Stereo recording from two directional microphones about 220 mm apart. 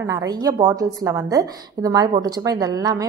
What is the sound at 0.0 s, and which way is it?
A woman's voice, 15° right (ahead or behind).